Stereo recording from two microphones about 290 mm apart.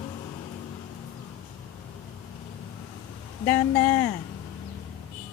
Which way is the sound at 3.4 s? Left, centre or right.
Centre.